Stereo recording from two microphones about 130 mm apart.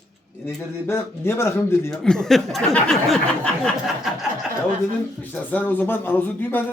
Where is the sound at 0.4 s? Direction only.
20° left (ahead or behind).